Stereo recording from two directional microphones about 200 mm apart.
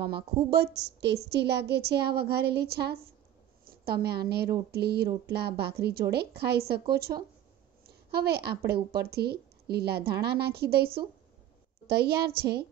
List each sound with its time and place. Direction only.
0.0 s a woman's voice: 55° right (ahead or behind)
12.4 s child singing: 55° right (ahead or behind)